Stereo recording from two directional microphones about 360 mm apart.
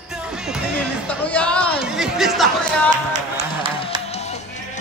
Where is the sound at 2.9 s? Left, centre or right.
Centre.